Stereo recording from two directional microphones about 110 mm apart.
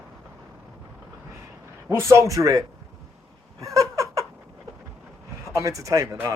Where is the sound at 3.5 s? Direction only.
30° right (ahead or behind).